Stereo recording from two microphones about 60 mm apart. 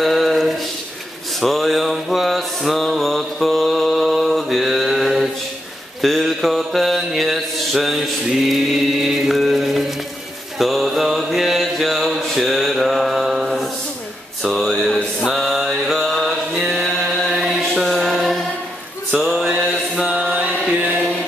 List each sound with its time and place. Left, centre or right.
0.0 s a sound: centre
1.4 s mantra: centre
14.5 s a sound: centre
14.9 s mantra: left
15.2 s mantra: centre
20.0 s mantra: centre
20.7 s chant: right